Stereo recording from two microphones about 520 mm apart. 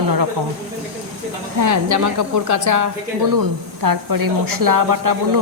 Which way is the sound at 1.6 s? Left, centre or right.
Right.